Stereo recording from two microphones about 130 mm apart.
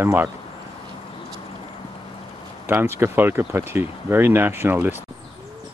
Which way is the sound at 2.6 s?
15° right (ahead or behind).